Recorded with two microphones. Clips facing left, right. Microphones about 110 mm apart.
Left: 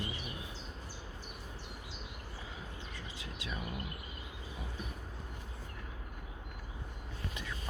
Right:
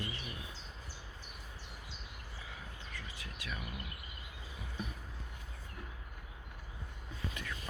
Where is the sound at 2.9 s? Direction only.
25° left (ahead or behind).